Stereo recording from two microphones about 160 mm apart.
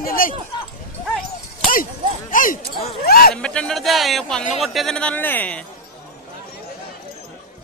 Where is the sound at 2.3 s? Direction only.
60° left (ahead or behind).